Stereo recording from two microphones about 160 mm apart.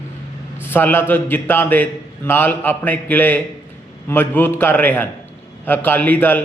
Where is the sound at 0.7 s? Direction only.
10° left (ahead or behind).